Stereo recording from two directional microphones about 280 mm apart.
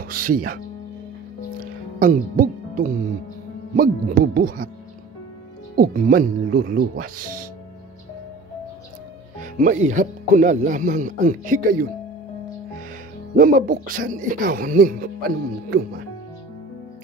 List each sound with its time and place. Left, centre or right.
0.0 s speech: right
2.0 s music: right
3.7 s speech: right
5.8 s speech: right
9.4 s speech: right
13.4 s speech: right